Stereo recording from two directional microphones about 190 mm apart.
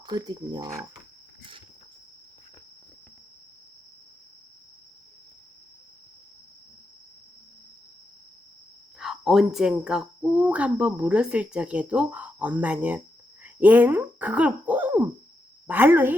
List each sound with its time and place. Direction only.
0.0 s cricket: 20° right (ahead or behind)
9.0 s a woman's voice: centre (ahead or behind)